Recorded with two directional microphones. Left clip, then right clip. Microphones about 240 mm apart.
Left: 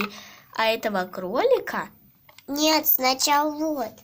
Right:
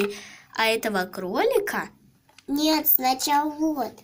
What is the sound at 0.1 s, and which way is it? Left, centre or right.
A woman's voice, centre.